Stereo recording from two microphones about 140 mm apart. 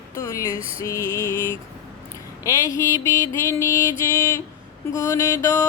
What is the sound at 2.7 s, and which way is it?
Male singing, 20° left (ahead or behind).